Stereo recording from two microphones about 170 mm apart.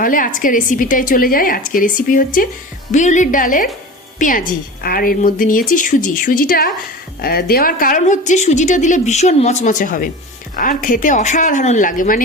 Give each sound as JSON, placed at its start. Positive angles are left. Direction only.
{"t": 0.0, "sound": "a woman's voice", "side_deg": 55}